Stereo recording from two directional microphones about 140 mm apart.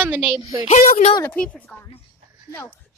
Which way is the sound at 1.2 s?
10° left (ahead or behind).